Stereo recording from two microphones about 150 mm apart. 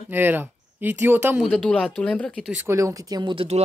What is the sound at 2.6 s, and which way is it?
Speech, 20° right (ahead or behind).